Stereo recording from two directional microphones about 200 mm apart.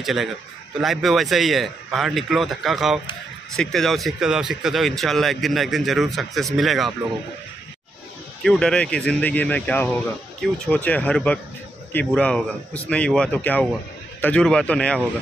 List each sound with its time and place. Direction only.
0.0 s a man's voice: centre (ahead or behind)
8.5 s a man's voice: 5° left (ahead or behind)